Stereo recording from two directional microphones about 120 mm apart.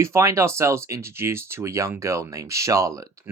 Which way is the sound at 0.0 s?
25° right (ahead or behind).